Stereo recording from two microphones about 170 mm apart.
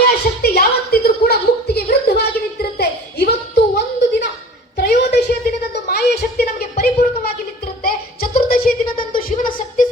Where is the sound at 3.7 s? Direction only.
85° left; by 9.8 s 55° left (ahead or behind).